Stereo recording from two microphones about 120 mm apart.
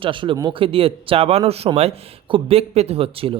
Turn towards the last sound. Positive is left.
turn(degrees=-50)  # may be behind; listen again after turning